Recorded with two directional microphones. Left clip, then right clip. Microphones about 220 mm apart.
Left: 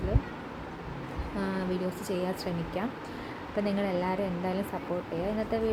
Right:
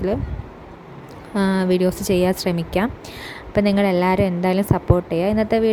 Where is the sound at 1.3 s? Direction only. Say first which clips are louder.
Right 14 dB; 45° right (ahead or behind).